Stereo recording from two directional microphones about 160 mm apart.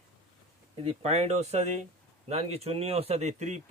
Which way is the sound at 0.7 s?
40° right (ahead or behind).